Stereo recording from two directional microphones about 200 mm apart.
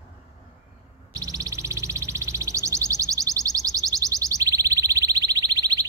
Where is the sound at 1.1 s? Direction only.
15° right (ahead or behind).